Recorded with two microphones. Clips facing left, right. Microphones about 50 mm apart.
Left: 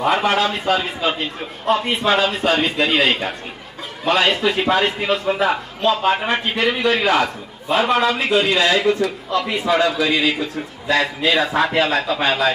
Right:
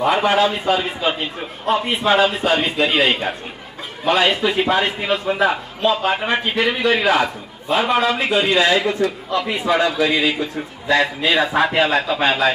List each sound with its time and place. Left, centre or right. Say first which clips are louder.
0.0 s a man's voice: right 1 dB; centre